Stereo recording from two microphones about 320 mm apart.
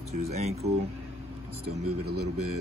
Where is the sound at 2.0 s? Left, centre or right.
Right.